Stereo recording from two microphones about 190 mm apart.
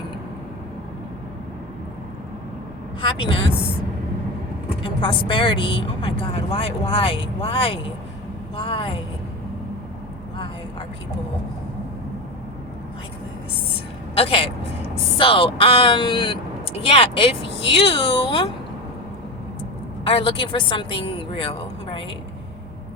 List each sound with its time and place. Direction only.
3.0 s speech: 25° left (ahead or behind)
4.8 s speech: 25° left (ahead or behind)
10.3 s vehicle: 25° left (ahead or behind)
14.2 s speech: 30° left (ahead or behind)
20.1 s speech: 30° left (ahead or behind)